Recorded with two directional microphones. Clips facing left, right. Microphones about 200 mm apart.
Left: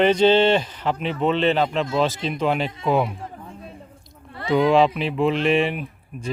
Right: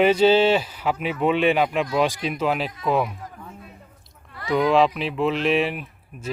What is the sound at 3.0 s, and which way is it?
Chatter, 30° left (ahead or behind).